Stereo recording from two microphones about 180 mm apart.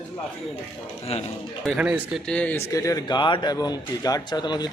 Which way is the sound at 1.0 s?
35° left (ahead or behind).